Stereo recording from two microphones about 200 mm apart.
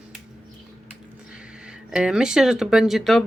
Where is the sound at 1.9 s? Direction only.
5° right (ahead or behind).